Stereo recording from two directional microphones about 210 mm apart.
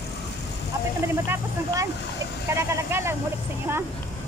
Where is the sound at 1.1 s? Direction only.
10° right (ahead or behind).